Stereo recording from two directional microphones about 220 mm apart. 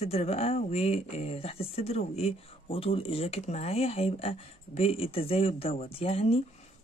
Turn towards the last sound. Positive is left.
turn(degrees=25)  # may be behind; listen again after turning